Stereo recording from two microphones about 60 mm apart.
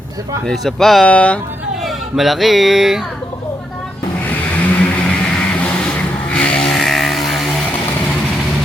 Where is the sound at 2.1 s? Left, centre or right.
Centre.